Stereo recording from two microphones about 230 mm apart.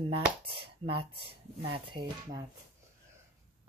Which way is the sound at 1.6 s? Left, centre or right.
Right.